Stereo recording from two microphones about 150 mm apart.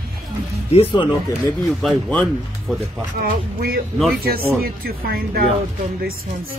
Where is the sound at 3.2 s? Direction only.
90° right.